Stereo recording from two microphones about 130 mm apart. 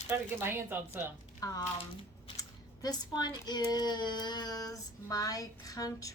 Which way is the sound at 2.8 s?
30° left (ahead or behind).